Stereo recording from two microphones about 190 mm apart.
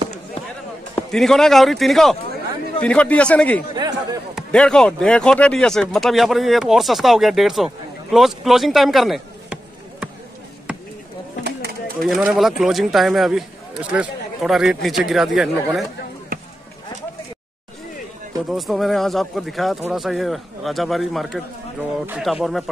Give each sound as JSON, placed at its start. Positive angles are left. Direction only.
{"t": 1.1, "sound": "a man's voice", "side_deg": 0}
{"t": 3.7, "sound": "a sound", "side_deg": -20}
{"t": 4.4, "sound": "speech", "side_deg": 5}
{"t": 12.0, "sound": "speech", "side_deg": 0}
{"t": 18.5, "sound": "speech", "side_deg": 0}